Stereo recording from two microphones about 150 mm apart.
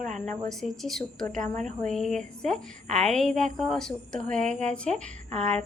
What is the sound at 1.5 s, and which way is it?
Speech, 55° right (ahead or behind).